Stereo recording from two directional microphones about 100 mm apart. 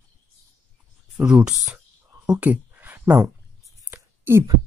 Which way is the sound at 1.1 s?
10° right (ahead or behind).